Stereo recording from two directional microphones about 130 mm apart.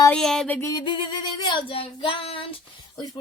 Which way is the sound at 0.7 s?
35° left (ahead or behind).